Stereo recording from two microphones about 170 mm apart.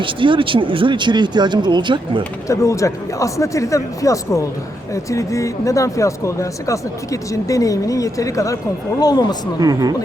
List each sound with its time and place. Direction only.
0.0 s speech: 30° right (ahead or behind)
2.5 s speech: 20° left (ahead or behind)
9.6 s speech: 20° right (ahead or behind)